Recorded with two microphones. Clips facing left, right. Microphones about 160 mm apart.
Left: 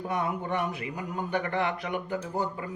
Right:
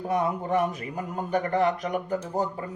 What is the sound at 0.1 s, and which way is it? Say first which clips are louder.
Speech: right 6 dB; 40° right (ahead or behind).